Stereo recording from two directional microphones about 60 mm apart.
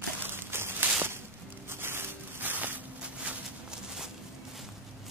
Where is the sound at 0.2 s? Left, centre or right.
Right.